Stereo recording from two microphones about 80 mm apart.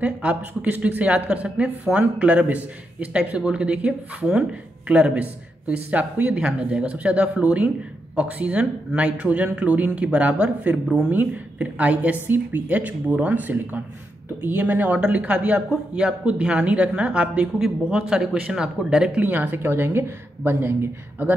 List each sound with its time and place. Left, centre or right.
0.0 s speech: centre